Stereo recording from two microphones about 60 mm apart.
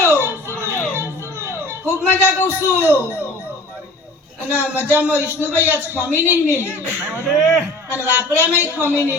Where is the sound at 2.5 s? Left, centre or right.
Right.